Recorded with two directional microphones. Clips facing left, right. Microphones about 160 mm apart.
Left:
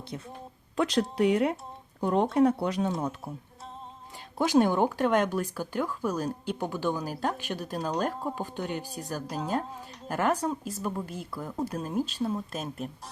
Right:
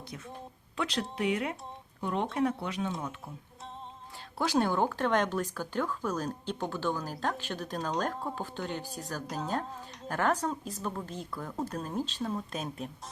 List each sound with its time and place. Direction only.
0.8 s speech: 45° left (ahead or behind)
4.4 s a woman's voice: 15° left (ahead or behind); by 12.9 s centre (ahead or behind)